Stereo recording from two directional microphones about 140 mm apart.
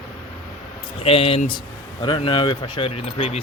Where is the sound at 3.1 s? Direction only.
45° left (ahead or behind).